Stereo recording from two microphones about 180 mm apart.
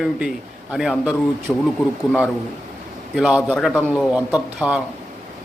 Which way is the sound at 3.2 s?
5° right (ahead or behind).